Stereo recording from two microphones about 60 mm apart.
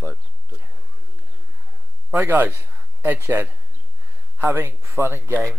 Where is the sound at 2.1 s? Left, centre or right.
Right.